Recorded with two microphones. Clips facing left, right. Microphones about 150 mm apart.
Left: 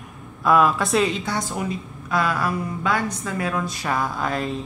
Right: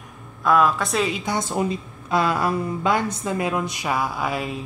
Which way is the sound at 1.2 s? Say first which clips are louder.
Right 3 dB; 20° right (ahead or behind).